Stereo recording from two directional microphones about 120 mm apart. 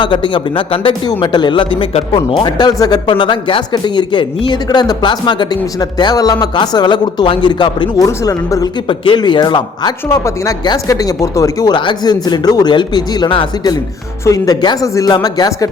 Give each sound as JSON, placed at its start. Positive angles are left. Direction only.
{"t": 0.0, "sound": "a man's voice", "side_deg": 45}
{"t": 2.4, "sound": "speech", "side_deg": 35}
{"t": 8.0, "sound": "speech", "side_deg": 30}
{"t": 8.9, "sound": "speech", "side_deg": 40}
{"t": 10.1, "sound": "speech", "side_deg": 25}
{"t": 11.7, "sound": "speech", "side_deg": 40}
{"t": 14.3, "sound": "speech", "side_deg": 30}